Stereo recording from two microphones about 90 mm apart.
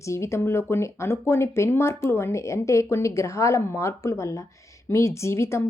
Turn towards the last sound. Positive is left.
turn(degrees=30)  # may be behind; listen again after turning